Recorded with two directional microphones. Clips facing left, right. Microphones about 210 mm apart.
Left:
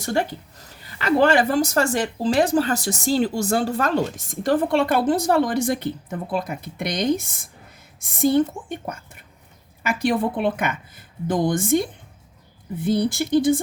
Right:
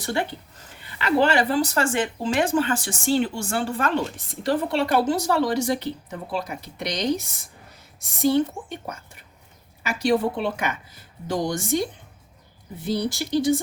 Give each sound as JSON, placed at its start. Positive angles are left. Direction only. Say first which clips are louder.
{"t": 0.0, "sound": "speech", "louder": "left 3 dB", "side_deg": 40}
{"t": 9.8, "sound": "speech", "louder": "even", "side_deg": 55}